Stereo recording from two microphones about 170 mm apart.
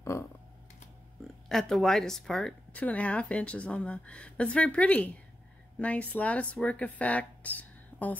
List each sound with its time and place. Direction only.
0.0 s speech: 15° left (ahead or behind)
1.5 s a woman's voice: centre (ahead or behind)